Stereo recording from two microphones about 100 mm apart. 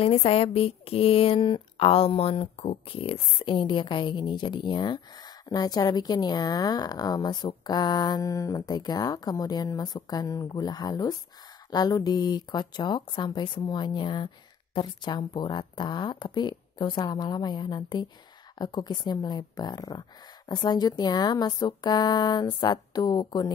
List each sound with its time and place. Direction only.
0.0 s a woman's voice: 90° left; by 23.5 s 45° left (ahead or behind)